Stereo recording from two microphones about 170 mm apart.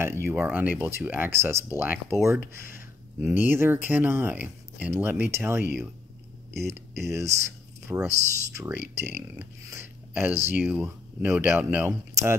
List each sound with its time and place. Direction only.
0.0 s speech: 15° right (ahead or behind)